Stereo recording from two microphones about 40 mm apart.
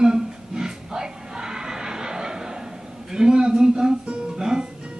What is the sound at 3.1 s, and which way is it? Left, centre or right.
Music, centre.